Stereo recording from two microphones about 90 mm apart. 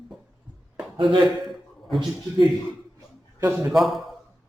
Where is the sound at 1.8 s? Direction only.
Centre (ahead or behind).